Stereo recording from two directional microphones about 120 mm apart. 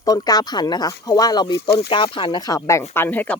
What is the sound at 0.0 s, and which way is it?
Speech, 30° left (ahead or behind).